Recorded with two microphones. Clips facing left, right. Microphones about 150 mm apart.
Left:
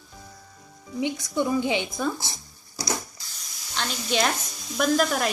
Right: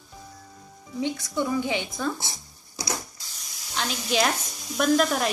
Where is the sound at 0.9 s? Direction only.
15° left (ahead or behind).